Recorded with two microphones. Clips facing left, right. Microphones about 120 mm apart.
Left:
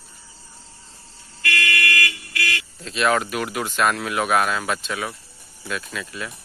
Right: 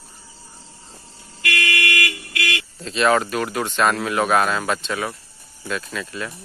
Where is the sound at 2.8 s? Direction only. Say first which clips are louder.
Right 3 dB; centre (ahead or behind).